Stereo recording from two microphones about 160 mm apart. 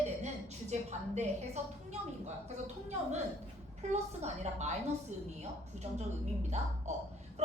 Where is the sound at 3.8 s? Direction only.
45° right (ahead or behind).